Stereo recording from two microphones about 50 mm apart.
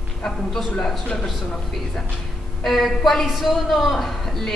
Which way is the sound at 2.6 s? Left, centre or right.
Centre.